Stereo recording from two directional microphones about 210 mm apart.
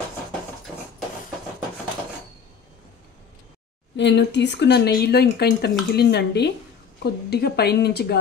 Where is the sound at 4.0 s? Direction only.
55° left (ahead or behind).